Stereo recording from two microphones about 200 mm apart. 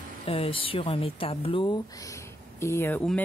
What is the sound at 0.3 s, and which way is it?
Speech, 25° left (ahead or behind).